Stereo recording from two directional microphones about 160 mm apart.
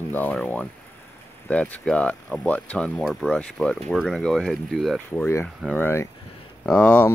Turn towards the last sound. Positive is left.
turn(degrees=10)  # may be behind; listen again after turning